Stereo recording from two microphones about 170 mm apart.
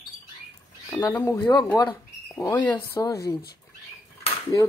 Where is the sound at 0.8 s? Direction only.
10° left (ahead or behind).